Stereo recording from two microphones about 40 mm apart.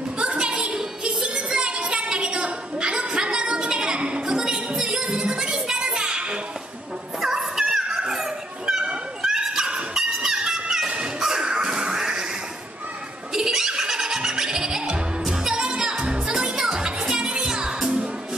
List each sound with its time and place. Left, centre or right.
0.2 s a sound: right
4.0 s music: right
7.2 s music: centre
8.0 s dog: centre
9.2 s a sound: centre
11.1 s music: centre
11.9 s a sound: centre
13.3 s baby laughter: centre
15.5 s music: right